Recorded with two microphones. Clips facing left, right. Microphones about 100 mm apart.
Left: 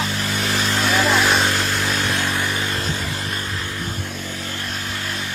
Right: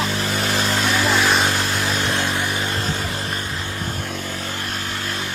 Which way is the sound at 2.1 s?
25° right (ahead or behind).